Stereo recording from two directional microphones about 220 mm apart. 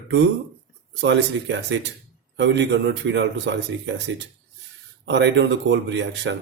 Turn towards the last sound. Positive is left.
turn(degrees=-55)  # may be behind; listen again after turning